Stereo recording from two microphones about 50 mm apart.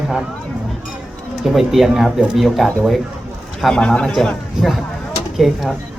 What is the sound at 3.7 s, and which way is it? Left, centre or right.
Speech, centre.